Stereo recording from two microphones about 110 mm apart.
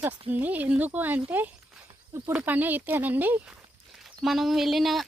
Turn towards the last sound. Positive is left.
turn(degrees=0)  # may be behind; listen again after turning